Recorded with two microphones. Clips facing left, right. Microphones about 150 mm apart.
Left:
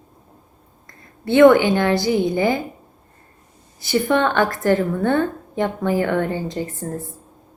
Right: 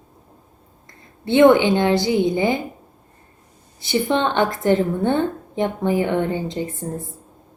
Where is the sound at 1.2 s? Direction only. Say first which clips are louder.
Left 1 dB; 20° right (ahead or behind).